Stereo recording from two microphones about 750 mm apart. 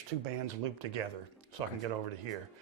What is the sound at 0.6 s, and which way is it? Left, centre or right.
Speech, right.